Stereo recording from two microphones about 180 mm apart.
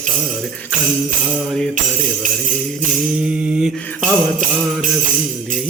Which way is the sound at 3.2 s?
5° right (ahead or behind).